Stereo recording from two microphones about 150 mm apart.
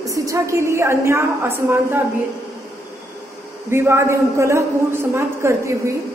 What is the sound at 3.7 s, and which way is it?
A woman's voice, 15° right (ahead or behind).